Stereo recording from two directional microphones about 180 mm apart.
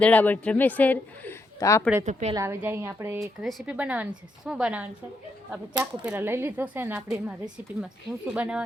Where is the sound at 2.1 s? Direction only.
40° right (ahead or behind).